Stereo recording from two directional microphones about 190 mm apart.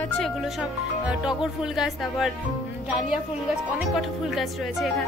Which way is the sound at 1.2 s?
5° right (ahead or behind).